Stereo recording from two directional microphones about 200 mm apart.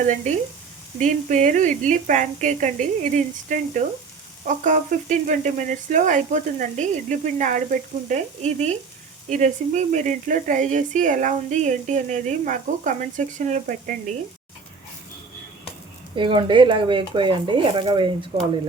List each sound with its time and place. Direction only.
0.9 s speech: 35° right (ahead or behind)
16.1 s speech: 25° right (ahead or behind)